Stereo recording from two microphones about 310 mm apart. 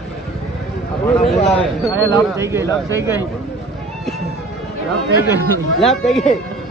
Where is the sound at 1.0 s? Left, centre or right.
Centre.